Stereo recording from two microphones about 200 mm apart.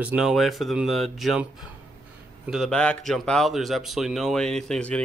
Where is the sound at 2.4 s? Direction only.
Centre (ahead or behind).